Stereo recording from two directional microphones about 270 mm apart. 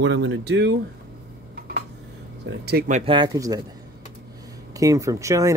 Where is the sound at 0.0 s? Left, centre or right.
Right.